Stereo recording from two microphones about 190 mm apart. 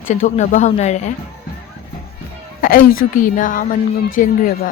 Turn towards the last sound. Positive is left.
turn(degrees=50)  # may be behind; listen again after turning